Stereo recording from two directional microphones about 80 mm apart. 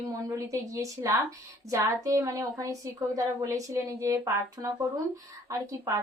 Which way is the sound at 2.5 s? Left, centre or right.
Right.